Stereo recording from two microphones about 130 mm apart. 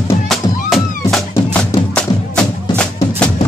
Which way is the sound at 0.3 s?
Centre (ahead or behind).